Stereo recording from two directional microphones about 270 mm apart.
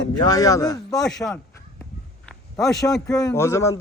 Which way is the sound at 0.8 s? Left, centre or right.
Centre.